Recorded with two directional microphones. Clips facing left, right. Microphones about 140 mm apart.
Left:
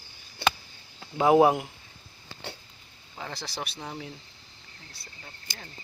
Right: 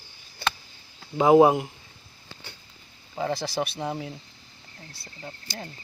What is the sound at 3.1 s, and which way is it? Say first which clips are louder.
Speech: right 10 dB; 45° right (ahead or behind).